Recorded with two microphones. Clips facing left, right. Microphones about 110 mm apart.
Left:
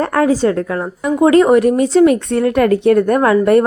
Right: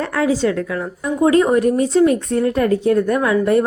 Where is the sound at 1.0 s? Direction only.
75° left (ahead or behind).